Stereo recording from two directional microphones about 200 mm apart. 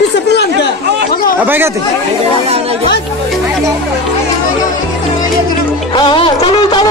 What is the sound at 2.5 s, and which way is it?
Music, 30° right (ahead or behind).